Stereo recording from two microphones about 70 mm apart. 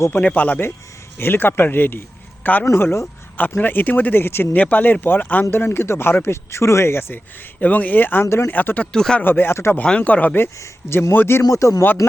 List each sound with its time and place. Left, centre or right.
0.2 s a man's voice: centre
2.6 s speech: left
3.3 s speech: left
4.5 s speech: left
7.6 s speech: left
8.4 s speech: left
8.9 s speech: centre
9.2 s speech: left
9.7 s speech: centre
10.6 s speech: left
11.4 s a man's voice: left